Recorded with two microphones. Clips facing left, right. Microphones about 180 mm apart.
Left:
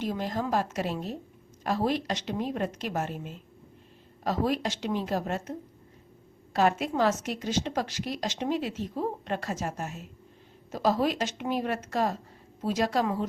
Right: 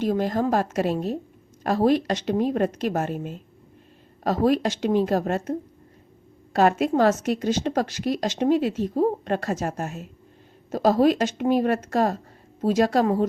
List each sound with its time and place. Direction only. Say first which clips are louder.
0.0 s a woman's voice: right 8 dB; 50° right (ahead or behind)
6.6 s a woman's voice: right 6 dB; 50° right (ahead or behind)